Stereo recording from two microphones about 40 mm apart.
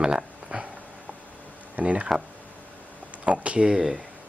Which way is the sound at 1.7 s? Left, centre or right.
Right.